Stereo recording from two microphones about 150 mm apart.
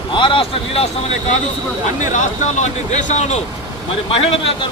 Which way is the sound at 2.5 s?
55° left (ahead or behind).